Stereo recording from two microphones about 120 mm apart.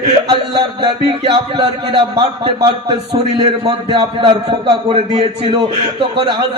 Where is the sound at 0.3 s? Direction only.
40° right (ahead or behind).